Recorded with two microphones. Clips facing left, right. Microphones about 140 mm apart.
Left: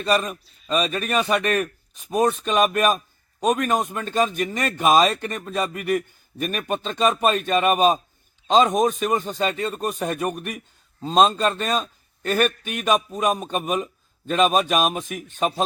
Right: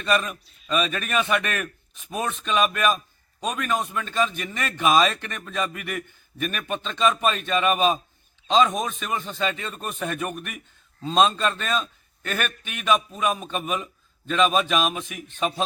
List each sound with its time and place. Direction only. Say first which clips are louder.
0.0 s a man's voice: left 2 dB; 35° left (ahead or behind)